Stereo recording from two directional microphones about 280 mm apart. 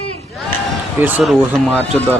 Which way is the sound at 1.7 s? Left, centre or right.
Centre.